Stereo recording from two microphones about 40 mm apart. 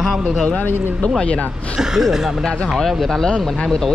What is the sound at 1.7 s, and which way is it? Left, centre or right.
Speech, centre.